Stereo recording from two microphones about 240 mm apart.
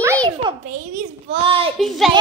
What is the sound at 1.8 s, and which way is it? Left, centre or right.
Speech, centre.